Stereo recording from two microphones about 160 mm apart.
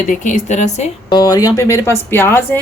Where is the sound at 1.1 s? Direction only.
25° left (ahead or behind).